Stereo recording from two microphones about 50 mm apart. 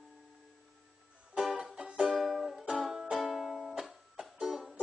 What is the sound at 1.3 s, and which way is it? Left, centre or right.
Music, right.